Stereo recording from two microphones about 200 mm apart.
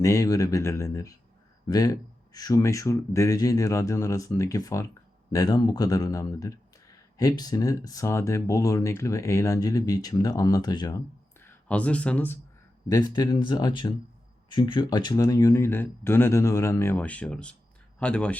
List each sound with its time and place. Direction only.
0.0 s speech: 15° left (ahead or behind)
11.3 s speech: 10° left (ahead or behind)